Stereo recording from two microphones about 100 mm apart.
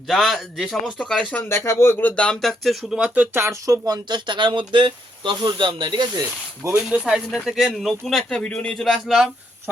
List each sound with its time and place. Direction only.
0.1 s speech: centre (ahead or behind)
1.4 s speech: 25° left (ahead or behind); by 3.0 s centre (ahead or behind)
3.0 s speech: 15° right (ahead or behind)
3.4 s speech: 30° right (ahead or behind); by 6.2 s 50° right (ahead or behind)
6.6 s speech: 30° right (ahead or behind)
7.3 s speech: 5° right (ahead or behind); by 8.8 s 10° left (ahead or behind)
8.8 s speech: centre (ahead or behind)